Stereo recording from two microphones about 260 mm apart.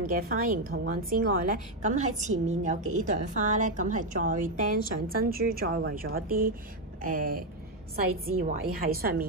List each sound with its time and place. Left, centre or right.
0.0 s a woman's voice: right